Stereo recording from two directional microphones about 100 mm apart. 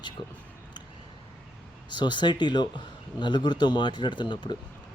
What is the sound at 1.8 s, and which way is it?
Speech, 50° left (ahead or behind).